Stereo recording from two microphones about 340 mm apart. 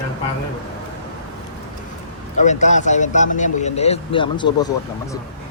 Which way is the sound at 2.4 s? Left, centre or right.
Left.